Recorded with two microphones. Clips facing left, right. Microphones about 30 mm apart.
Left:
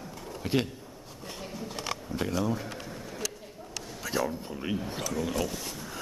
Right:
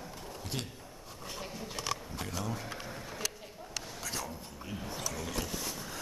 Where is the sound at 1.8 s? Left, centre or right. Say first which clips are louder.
Left 4 dB; centre.